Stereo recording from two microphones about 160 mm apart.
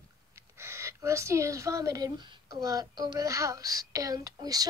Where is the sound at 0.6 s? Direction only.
15° right (ahead or behind).